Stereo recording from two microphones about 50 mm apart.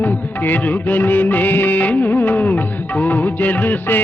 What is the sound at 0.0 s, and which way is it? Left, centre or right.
Music of bollywood, left.